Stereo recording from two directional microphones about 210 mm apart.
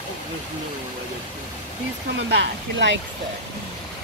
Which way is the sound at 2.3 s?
60° right (ahead or behind).